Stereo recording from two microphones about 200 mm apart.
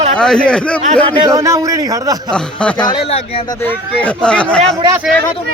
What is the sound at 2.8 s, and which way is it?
Speech, 25° left (ahead or behind).